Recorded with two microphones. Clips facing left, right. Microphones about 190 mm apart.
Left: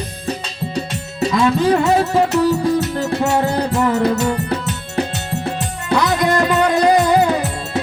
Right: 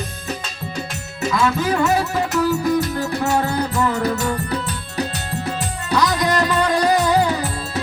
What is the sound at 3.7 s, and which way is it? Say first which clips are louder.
Music: left 6 dB; 25° left (ahead or behind).